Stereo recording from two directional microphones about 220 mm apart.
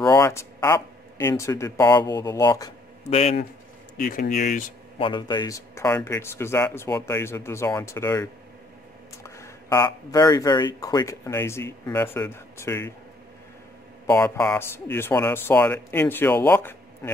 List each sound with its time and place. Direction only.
0.0 s speech: 15° left (ahead or behind)
3.1 s speech: 30° left (ahead or behind)
4.0 s speech: 40° left (ahead or behind)
4.9 s speech: 20° left (ahead or behind)
14.0 s speech: 10° left (ahead or behind)